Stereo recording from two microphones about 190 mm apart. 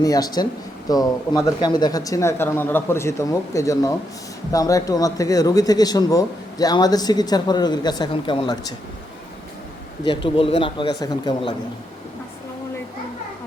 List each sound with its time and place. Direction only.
0.0 s speech: 20° left (ahead or behind)
10.0 s speech: 25° left (ahead or behind)